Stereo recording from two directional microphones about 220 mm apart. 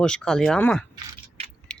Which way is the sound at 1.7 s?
5° left (ahead or behind).